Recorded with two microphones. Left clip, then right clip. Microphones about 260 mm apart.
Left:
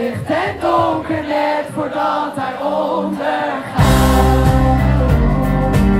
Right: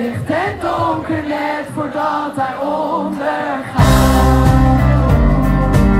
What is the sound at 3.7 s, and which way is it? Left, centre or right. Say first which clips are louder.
Music: right 1 dB; right.